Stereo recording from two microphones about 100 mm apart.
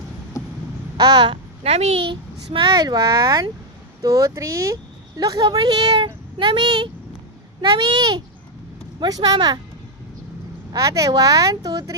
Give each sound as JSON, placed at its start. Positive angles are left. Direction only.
{"t": 0.4, "sound": "a sound", "side_deg": 30}
{"t": 0.9, "sound": "speech", "side_deg": -45}
{"t": 1.6, "sound": "speech", "side_deg": -85}
{"t": 6.4, "sound": "speech", "side_deg": -55}
{"t": 10.7, "sound": "speech", "side_deg": -35}